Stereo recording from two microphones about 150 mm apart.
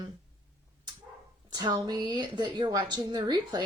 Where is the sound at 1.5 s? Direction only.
30° right (ahead or behind).